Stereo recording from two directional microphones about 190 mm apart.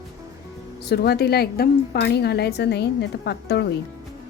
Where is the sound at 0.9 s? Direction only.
55° left (ahead or behind).